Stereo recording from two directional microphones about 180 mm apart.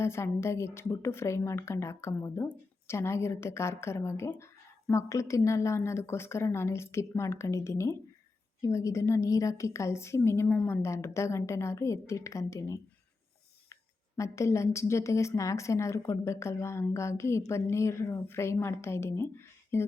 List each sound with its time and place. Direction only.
0.0 s a woman's voice: 15° left (ahead or behind)
14.2 s a woman's voice: 15° left (ahead or behind)